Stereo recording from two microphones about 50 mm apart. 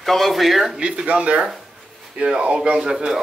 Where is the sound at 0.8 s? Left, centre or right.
Right.